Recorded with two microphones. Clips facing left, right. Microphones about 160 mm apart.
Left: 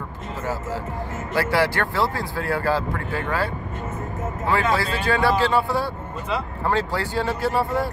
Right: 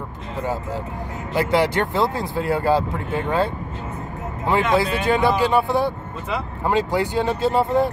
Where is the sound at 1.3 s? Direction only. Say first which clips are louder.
Right 2 dB; 20° right (ahead or behind).